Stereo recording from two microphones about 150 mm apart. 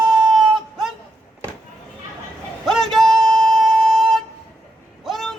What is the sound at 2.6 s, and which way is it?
Music, centre (ahead or behind).